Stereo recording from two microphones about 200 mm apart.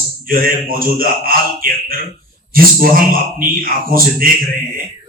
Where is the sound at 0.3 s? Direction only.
45° right (ahead or behind).